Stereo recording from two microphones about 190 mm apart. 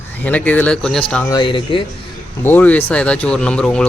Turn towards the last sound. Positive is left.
turn(degrees=5)  # may be behind; listen again after turning